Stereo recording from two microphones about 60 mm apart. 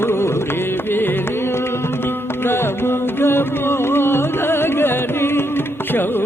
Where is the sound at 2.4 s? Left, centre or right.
Left.